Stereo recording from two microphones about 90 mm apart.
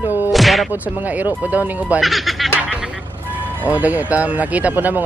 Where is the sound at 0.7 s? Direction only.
15° right (ahead or behind).